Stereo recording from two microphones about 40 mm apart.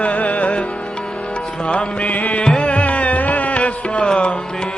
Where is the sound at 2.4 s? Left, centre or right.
Left.